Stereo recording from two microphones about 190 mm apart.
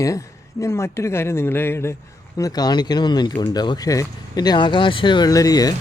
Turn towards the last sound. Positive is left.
turn(degrees=20)  # may be behind; listen again after turning